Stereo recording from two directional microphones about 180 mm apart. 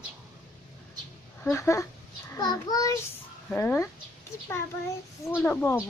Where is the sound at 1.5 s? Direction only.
15° left (ahead or behind).